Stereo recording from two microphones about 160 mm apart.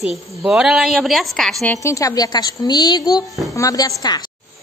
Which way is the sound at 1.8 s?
20° left (ahead or behind).